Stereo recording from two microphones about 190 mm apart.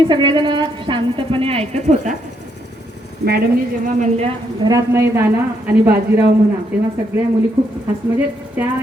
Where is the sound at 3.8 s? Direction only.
35° right (ahead or behind).